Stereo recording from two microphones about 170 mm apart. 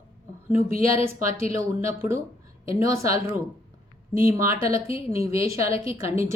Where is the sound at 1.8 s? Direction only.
15° right (ahead or behind).